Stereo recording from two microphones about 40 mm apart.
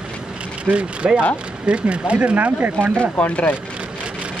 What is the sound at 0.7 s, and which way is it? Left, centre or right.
Speech, right.